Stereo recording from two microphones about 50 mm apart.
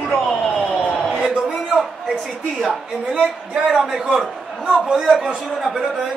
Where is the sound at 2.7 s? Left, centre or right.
Right.